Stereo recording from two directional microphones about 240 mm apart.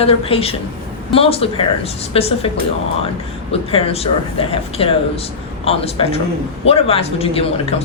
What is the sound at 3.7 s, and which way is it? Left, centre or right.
Speech, left.